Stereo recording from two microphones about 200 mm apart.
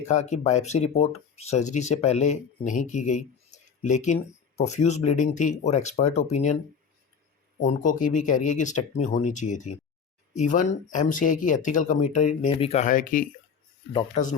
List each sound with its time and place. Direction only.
0.1 s speech: 35° left (ahead or behind)
7.6 s speech: 35° left (ahead or behind)